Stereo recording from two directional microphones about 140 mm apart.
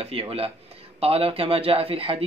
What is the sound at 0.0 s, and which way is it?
Speech, 45° right (ahead or behind).